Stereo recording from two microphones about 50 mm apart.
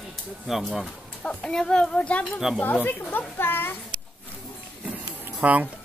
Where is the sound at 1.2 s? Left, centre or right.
Centre.